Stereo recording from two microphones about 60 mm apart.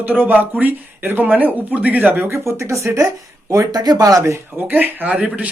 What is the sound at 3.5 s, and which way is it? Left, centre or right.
Speech, right.